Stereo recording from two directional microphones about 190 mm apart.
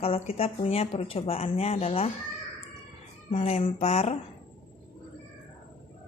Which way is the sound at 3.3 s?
30° left (ahead or behind).